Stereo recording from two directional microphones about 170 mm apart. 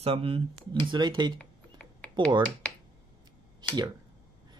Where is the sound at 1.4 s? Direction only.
5° left (ahead or behind).